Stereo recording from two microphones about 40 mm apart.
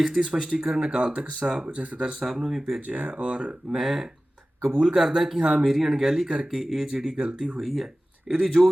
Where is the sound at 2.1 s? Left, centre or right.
Centre.